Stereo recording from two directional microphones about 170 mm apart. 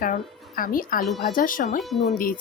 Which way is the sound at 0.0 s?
55° left (ahead or behind).